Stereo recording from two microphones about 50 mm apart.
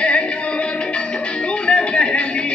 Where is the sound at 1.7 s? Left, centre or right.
Left.